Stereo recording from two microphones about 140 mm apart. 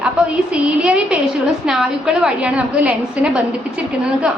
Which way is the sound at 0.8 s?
10° right (ahead or behind).